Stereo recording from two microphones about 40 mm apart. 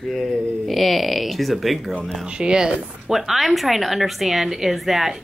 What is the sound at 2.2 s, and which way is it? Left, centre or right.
Speech, right.